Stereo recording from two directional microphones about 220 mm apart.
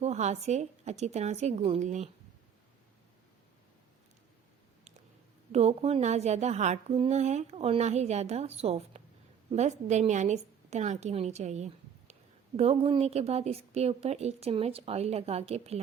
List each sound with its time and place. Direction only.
0.0 s a woman's voice: 30° right (ahead or behind)
5.5 s a woman's voice: 30° right (ahead or behind)